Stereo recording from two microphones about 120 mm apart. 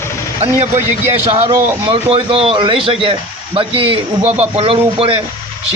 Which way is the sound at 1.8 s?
50° right (ahead or behind).